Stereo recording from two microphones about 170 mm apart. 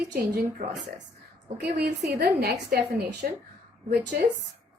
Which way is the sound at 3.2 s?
55° right (ahead or behind).